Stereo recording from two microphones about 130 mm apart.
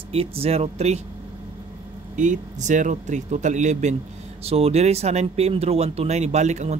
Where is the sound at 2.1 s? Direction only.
70° right (ahead or behind).